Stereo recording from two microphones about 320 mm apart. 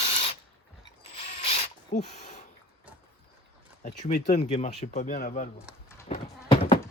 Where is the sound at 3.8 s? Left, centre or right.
Left.